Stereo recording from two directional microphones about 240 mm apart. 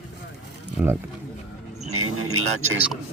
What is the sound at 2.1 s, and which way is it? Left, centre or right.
Music, right.